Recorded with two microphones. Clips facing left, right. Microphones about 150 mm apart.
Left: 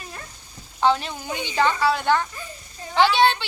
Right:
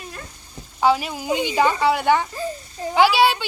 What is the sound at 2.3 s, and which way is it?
Speech, 30° right (ahead or behind).